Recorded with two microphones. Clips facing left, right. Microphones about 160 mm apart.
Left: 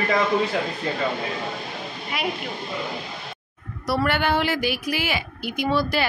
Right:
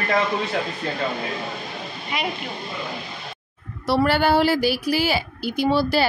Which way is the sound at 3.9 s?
30° right (ahead or behind).